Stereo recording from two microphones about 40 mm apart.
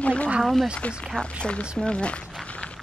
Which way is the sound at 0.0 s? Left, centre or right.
Left.